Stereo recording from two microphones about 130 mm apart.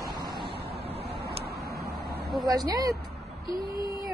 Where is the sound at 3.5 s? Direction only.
35° left (ahead or behind).